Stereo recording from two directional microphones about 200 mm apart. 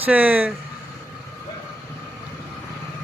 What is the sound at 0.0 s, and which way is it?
Speech, 10° right (ahead or behind).